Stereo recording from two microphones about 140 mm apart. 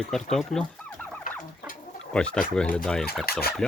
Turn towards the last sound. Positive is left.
turn(degrees=90)